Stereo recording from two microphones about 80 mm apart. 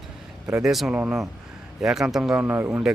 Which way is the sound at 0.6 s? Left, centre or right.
Centre.